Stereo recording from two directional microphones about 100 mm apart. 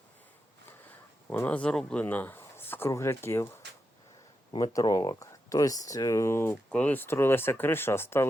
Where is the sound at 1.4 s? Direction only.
15° left (ahead or behind).